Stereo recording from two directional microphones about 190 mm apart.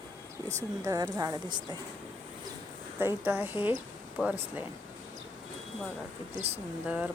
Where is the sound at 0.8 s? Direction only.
15° right (ahead or behind).